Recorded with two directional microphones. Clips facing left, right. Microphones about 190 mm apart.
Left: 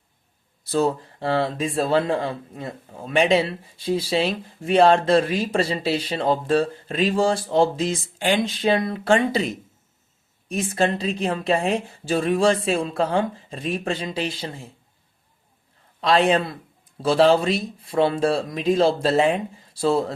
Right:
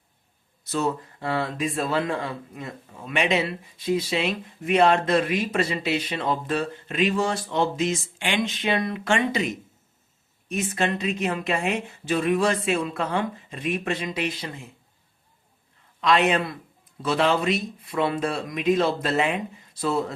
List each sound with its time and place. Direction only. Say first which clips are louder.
0.6 s speech: left 4 dB; 30° left (ahead or behind)
10.5 s speech: left 3 dB; 30° left (ahead or behind)
16.0 s speech: left 3 dB; 35° left (ahead or behind)